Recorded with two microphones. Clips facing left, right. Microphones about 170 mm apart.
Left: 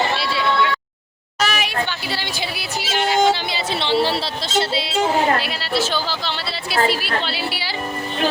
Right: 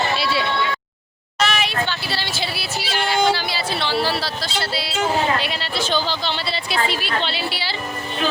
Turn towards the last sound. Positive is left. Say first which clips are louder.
# even
turn(degrees=10)  # may be behind; listen again after turning